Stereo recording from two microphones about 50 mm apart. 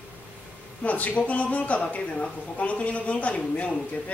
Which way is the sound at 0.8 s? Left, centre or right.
Left.